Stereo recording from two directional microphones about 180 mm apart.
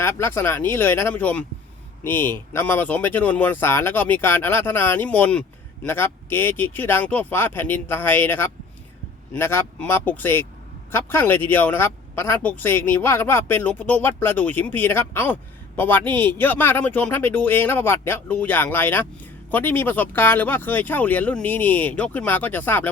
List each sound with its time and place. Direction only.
0.0 s speech: 15° left (ahead or behind)